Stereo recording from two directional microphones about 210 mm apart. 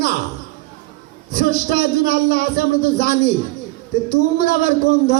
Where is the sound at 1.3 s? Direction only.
45° left (ahead or behind).